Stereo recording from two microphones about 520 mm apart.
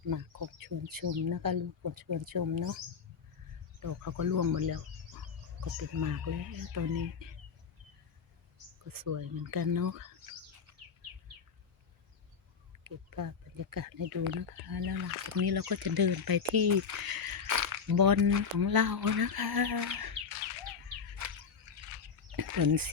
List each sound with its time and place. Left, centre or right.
0.1 s speech: right
3.8 s speech: right
8.9 s speech: right
12.8 s speech: right
21.2 s a sound: right
22.4 s a sound: right